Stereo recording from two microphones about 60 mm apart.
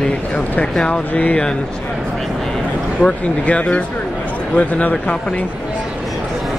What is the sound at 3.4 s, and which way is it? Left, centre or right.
Speech, left.